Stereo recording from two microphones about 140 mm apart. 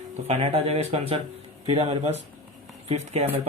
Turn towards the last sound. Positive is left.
turn(degrees=-50)  # may be behind; listen again after turning